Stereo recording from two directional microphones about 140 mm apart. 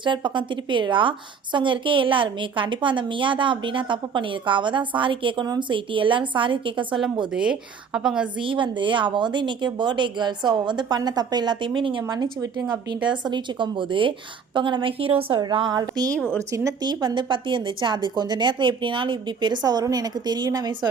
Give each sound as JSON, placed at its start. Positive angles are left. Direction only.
{"t": 0.0, "sound": "a woman's voice", "side_deg": -35}
{"t": 7.3, "sound": "a woman's voice", "side_deg": -5}
{"t": 8.4, "sound": "a woman's voice", "side_deg": -35}
{"t": 16.1, "sound": "speech", "side_deg": 5}
{"t": 16.5, "sound": "a woman's voice", "side_deg": -25}